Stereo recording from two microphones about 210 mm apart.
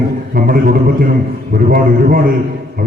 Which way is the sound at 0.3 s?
45° right (ahead or behind).